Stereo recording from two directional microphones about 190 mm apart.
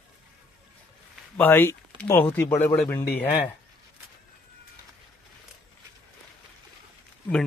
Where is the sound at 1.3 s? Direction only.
10° left (ahead or behind).